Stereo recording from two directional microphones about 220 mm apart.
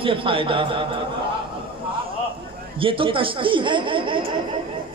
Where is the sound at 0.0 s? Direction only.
25° right (ahead or behind).